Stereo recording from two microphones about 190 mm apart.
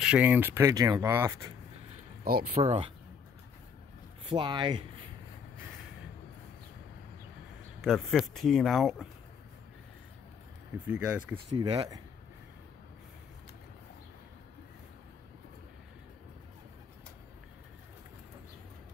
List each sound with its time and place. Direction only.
0.0 s speech: 5° right (ahead or behind)
2.5 s speech: 30° right (ahead or behind)
4.3 s speech: 25° right (ahead or behind)
7.8 s speech: centre (ahead or behind)
10.9 s speech: 5° right (ahead or behind)
11.5 s speech: 25° right (ahead or behind)